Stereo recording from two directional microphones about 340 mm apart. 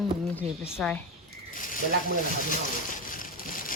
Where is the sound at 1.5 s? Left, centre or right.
Left.